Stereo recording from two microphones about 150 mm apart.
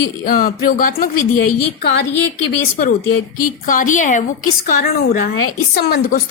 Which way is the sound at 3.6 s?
60° left (ahead or behind).